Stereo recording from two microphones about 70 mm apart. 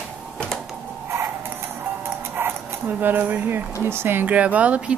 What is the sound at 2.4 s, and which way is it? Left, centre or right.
Dog, right.